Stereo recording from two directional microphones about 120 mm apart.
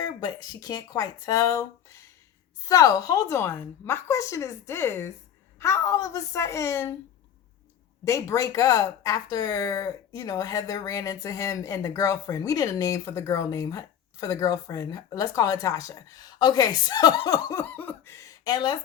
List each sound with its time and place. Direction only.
0.0 s speech: 35° left (ahead or behind)
8.0 s speech: 25° left (ahead or behind)